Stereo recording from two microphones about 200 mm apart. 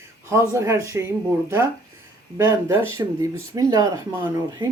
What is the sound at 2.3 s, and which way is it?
Speech, 15° right (ahead or behind).